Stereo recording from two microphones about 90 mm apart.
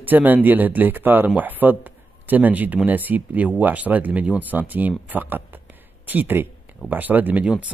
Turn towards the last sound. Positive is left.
turn(degrees=-20)  # may be behind; listen again after turning